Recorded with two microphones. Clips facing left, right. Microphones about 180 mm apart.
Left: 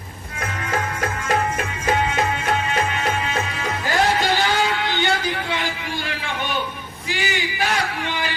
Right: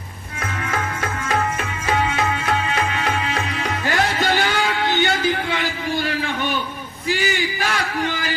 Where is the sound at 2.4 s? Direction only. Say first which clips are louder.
Even; 35° left (ahead or behind).